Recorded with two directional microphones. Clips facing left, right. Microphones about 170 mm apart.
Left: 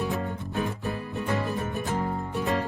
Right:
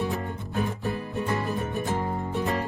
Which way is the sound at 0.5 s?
20° right (ahead or behind).